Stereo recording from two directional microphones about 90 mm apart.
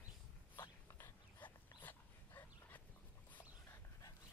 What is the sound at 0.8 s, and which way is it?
Dog, 30° left (ahead or behind).